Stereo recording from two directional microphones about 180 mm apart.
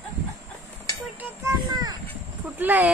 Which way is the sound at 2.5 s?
10° right (ahead or behind).